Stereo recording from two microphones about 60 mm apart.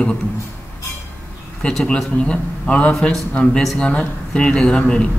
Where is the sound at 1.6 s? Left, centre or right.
Centre.